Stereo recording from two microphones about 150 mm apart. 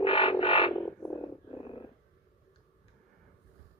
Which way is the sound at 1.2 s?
35° left (ahead or behind).